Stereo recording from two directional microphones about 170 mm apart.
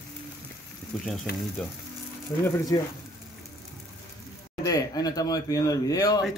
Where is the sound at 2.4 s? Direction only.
20° left (ahead or behind).